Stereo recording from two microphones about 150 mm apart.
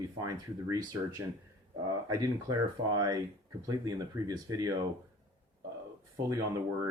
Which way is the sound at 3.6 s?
25° right (ahead or behind).